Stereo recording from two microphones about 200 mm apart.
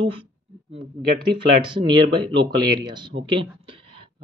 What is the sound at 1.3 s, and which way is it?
Speech, 25° right (ahead or behind).